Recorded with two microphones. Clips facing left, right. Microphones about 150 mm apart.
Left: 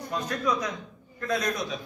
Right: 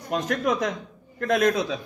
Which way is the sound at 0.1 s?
70° right (ahead or behind).